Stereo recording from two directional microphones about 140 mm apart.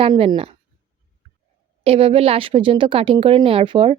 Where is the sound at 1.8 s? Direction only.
45° right (ahead or behind).